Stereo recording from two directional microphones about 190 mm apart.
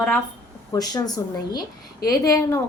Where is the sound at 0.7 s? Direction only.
20° left (ahead or behind).